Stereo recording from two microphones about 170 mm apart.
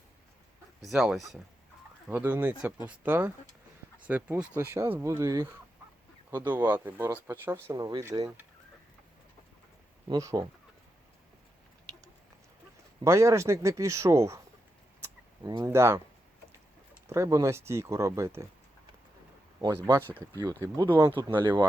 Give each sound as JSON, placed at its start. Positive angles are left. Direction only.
{"t": 0.8, "sound": "speech", "side_deg": 0}
{"t": 10.1, "sound": "speech", "side_deg": -20}
{"t": 13.1, "sound": "speech", "side_deg": -15}
{"t": 15.0, "sound": "a sound", "side_deg": -20}
{"t": 17.1, "sound": "speech", "side_deg": -20}
{"t": 20.4, "sound": "speech", "side_deg": -20}